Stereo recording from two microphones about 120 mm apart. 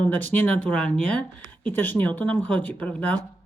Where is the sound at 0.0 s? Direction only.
15° left (ahead or behind).